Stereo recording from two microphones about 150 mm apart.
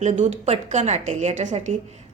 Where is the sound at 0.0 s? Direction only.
50° right (ahead or behind).